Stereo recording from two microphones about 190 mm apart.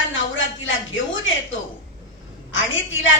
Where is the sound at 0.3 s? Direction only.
90° left.